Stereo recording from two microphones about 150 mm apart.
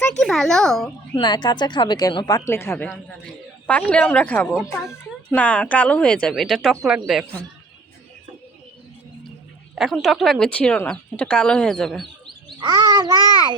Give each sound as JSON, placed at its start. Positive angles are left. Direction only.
{"t": 0.2, "sound": "speech", "side_deg": 5}
{"t": 1.1, "sound": "speech", "side_deg": 30}
{"t": 4.5, "sound": "speech", "side_deg": 0}
{"t": 4.9, "sound": "speech", "side_deg": 10}
{"t": 9.7, "sound": "speech", "side_deg": 0}
{"t": 12.0, "sound": "bird", "side_deg": -30}